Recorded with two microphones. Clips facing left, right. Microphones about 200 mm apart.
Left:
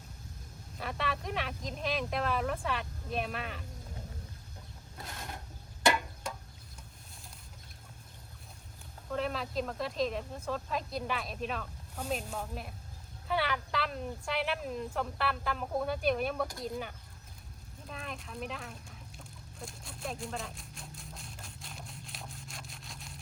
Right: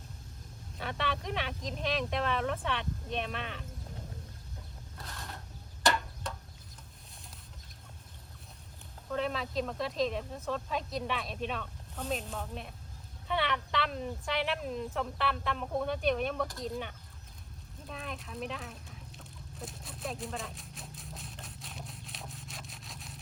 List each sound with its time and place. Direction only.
0.8 s speech: centre (ahead or behind)
4.9 s a sound: 20° left (ahead or behind)
9.1 s speech: centre (ahead or behind)
17.8 s chicken: centre (ahead or behind)